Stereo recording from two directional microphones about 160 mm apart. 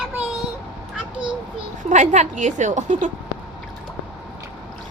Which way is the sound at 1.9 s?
50° right (ahead or behind).